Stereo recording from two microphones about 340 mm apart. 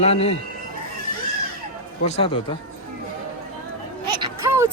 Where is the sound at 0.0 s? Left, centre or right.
Centre.